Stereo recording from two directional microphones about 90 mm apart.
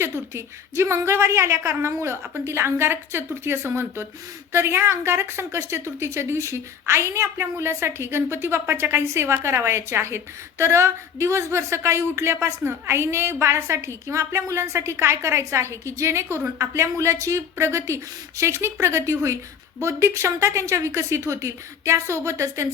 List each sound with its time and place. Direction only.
0.0 s a woman's voice: 30° right (ahead or behind)